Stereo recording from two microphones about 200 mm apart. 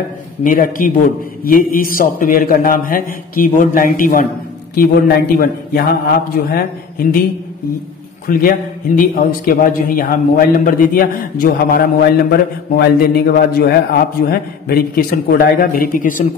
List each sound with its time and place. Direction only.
0.4 s a man's voice: 45° left (ahead or behind)
8.3 s a man's voice: 45° left (ahead or behind)